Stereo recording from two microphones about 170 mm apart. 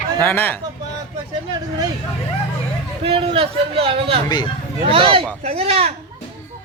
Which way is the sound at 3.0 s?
35° right (ahead or behind).